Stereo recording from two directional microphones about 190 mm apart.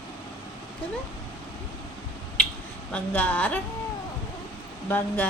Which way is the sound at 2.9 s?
10° left (ahead or behind).